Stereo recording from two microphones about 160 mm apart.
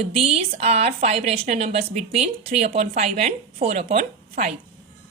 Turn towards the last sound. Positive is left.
turn(degrees=-55)  # may be behind; listen again after turning